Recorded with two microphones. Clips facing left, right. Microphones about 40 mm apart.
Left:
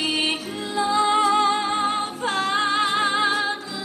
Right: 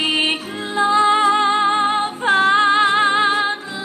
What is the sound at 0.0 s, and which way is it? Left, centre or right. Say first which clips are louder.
Music: right 5 dB; right.